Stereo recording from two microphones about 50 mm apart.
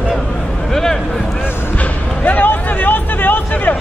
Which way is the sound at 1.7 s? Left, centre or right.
Left.